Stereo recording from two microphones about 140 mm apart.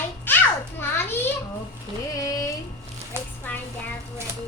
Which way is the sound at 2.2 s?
25° left (ahead or behind).